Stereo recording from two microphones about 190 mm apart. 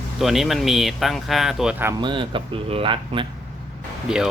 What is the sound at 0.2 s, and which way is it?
Speech, centre (ahead or behind).